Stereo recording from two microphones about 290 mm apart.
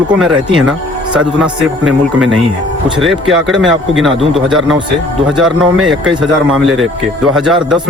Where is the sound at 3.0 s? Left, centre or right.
Centre.